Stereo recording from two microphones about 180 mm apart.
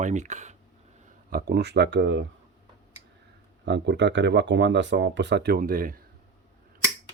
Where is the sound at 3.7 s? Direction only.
75° right (ahead or behind); by 6.0 s 50° right (ahead or behind).